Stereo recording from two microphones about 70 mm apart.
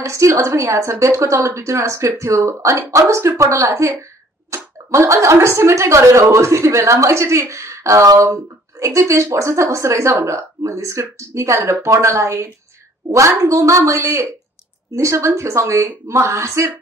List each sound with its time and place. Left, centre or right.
0.0 s speech: right